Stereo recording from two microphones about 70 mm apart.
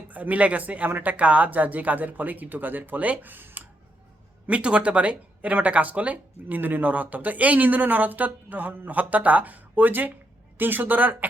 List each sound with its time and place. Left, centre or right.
0.1 s speech: right
4.4 s speech: centre